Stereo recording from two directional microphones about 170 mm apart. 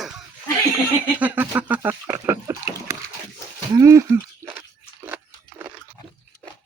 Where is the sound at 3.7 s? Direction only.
20° right (ahead or behind).